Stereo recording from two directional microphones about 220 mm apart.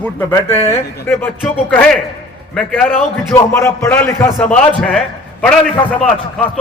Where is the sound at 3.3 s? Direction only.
15° left (ahead or behind).